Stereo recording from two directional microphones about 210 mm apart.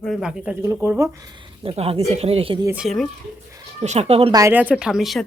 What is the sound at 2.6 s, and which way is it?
Speech, 5° right (ahead or behind).